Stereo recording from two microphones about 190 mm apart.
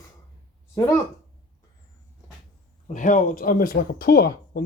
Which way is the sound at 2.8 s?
40° left (ahead or behind).